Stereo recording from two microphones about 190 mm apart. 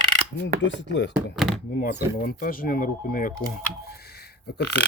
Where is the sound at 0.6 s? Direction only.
70° left (ahead or behind).